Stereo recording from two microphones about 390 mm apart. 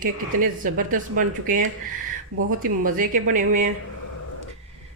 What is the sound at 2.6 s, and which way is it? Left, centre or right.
Speech, right.